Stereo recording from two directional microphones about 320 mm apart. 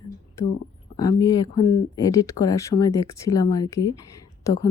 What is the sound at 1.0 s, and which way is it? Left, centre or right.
A woman's voice, centre.